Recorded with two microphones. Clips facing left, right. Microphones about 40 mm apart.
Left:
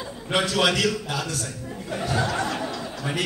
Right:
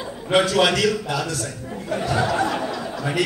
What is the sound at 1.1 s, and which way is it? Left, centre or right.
Speech, right.